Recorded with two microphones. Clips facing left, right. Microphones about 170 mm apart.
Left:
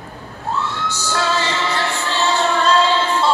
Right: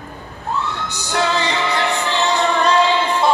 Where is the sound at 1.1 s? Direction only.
20° right (ahead or behind).